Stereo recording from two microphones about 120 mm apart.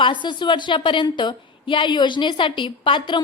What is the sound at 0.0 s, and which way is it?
A woman's voice, 40° left (ahead or behind).